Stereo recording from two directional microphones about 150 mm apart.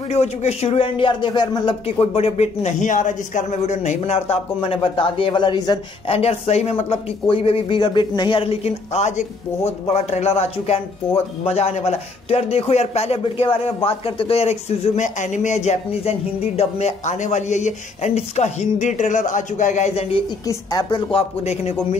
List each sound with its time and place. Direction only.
0.1 s speech: 45° left (ahead or behind); by 1.8 s 30° left (ahead or behind)
1.9 s a man's voice: 45° left (ahead or behind)
6.0 s a man's voice: 40° left (ahead or behind)
20.2 s a woman's voice: 30° left (ahead or behind)
21.1 s a man's voice: 45° left (ahead or behind)